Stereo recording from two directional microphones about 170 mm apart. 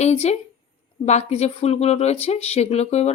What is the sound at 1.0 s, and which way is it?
Speech, 40° left (ahead or behind).